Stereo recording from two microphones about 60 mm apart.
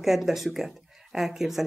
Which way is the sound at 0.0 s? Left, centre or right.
Centre.